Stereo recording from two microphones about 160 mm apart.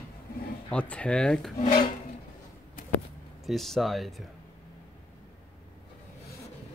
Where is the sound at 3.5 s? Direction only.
Centre (ahead or behind).